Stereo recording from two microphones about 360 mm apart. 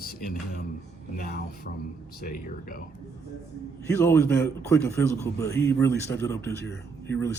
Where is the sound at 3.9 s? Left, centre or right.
Centre.